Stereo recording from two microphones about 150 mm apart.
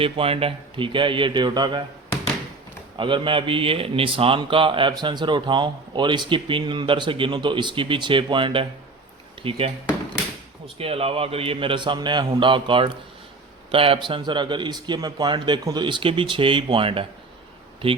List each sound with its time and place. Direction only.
0.0 s a man's voice: 40° right (ahead or behind)
3.0 s a man's voice: 35° right (ahead or behind)
10.8 s a man's voice: 40° right (ahead or behind)